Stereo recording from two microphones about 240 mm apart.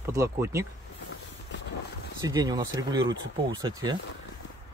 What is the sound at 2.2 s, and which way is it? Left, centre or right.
Speech, centre.